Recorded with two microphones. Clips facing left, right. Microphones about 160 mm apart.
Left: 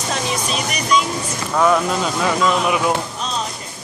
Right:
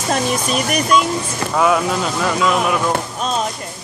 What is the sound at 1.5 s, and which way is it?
Speech, 5° right (ahead or behind).